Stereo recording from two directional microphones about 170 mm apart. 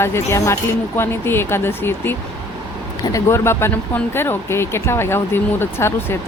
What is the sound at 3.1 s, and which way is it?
Speech, 15° left (ahead or behind).